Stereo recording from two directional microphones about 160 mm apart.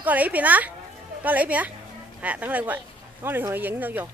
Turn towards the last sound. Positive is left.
turn(degrees=-10)  # may be behind; listen again after turning